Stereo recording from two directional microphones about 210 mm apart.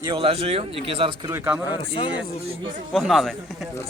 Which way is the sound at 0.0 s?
25° right (ahead or behind).